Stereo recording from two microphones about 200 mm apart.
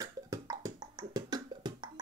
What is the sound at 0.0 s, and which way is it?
Beatboxing, 15° right (ahead or behind).